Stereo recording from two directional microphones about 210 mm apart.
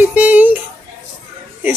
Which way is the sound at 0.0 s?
5° right (ahead or behind).